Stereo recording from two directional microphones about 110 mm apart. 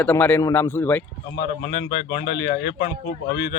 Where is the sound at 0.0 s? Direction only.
20° left (ahead or behind).